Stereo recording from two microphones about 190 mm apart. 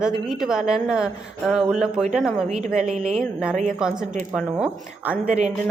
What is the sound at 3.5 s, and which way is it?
Speech, 40° right (ahead or behind).